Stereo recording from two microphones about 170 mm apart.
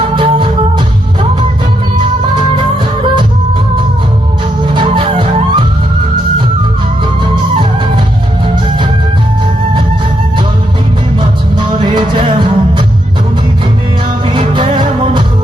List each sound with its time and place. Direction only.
0.2 s music: 30° right (ahead or behind)
4.7 s music: 30° right (ahead or behind)
11.2 s music: 30° right (ahead or behind)
14.3 s music: 30° right (ahead or behind)